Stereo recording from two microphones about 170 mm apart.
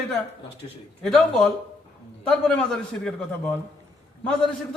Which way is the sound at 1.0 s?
5° left (ahead or behind).